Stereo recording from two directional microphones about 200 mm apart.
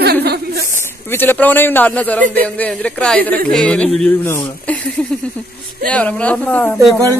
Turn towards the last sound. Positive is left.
turn(degrees=5)  # may be behind; listen again after turning